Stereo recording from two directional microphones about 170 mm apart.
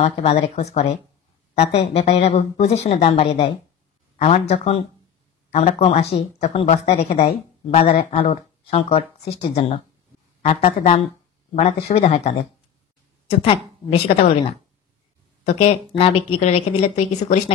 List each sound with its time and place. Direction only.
0.0 s speech: 35° left (ahead or behind)